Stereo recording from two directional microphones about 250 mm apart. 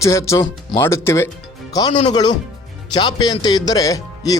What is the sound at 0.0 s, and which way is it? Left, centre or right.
Speech, centre.